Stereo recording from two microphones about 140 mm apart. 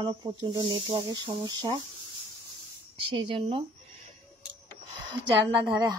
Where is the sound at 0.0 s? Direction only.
35° right (ahead or behind).